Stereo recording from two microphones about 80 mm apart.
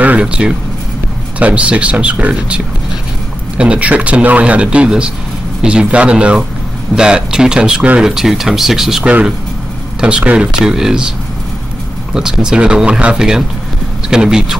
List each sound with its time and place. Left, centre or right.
0.0 s a sound: centre
1.4 s speech: centre
9.0 s speech: centre